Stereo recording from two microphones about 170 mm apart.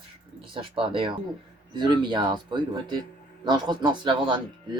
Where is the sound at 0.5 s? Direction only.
30° right (ahead or behind).